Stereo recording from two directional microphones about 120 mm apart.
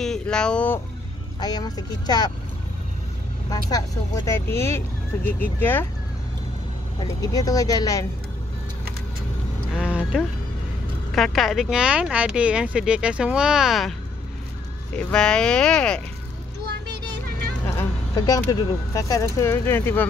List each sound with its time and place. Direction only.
0.0 s speech: 5° left (ahead or behind)
1.4 s speech: 35° left (ahead or behind)
3.4 s speech: 30° left (ahead or behind)
7.2 s speech: 30° left (ahead or behind)
9.8 s a sound: 10° right (ahead or behind)
11.1 s speech: centre (ahead or behind)
15.0 s speech: 10° left (ahead or behind)
17.6 s speech: 25° left (ahead or behind)